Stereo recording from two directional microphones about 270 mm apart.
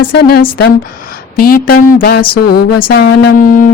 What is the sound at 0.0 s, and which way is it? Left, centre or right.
Speech, left.